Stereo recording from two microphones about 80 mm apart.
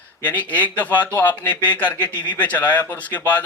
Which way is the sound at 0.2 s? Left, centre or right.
Centre.